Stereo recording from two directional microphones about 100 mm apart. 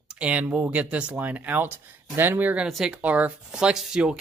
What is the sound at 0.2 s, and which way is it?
Speech, 15° right (ahead or behind).